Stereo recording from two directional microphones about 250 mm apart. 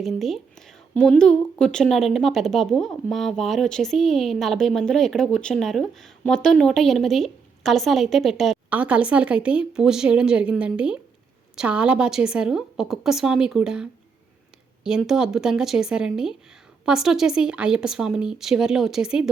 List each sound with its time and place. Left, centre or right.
0.0 s speech: centre
14.8 s speech: centre